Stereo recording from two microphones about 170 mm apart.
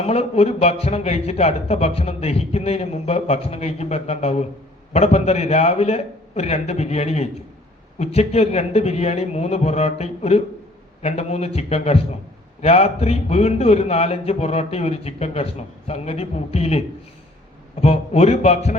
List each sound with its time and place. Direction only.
0.0 s a man's voice: 35° left (ahead or behind)